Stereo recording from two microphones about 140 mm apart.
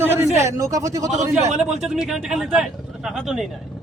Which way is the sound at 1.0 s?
55° right (ahead or behind).